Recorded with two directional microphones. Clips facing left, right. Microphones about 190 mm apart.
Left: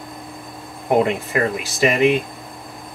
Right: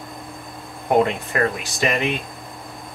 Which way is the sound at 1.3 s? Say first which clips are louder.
Left 1 dB; centre (ahead or behind).